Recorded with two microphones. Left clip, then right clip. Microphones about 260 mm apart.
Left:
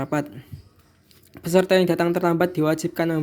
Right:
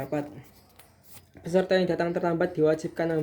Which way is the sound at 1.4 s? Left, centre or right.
Left.